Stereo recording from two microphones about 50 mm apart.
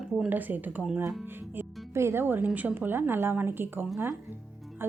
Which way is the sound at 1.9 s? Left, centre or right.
Right.